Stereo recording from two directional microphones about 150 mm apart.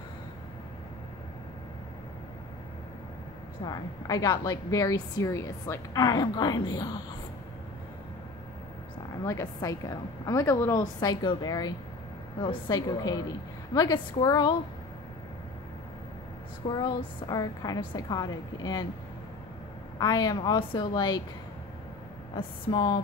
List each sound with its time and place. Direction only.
3.6 s a woman's voice: 25° left (ahead or behind)
9.2 s a woman's voice: 20° left (ahead or behind)
16.6 s a woman's voice: 30° left (ahead or behind)
20.0 s a woman's voice: 25° left (ahead or behind)
22.7 s a woman's voice: 30° left (ahead or behind)